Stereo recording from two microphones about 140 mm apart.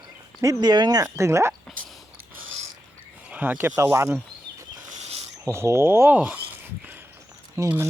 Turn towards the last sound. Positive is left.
turn(degrees=-15)  # may be behind; listen again after turning